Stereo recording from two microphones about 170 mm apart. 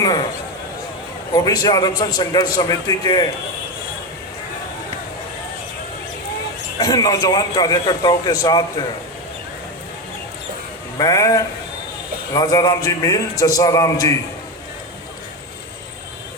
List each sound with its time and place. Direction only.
0.0 s a sound: 25° left (ahead or behind)
1.3 s a man's voice: 20° left (ahead or behind)
6.7 s a man's voice: 25° left (ahead or behind)
10.9 s a man's voice: 20° left (ahead or behind)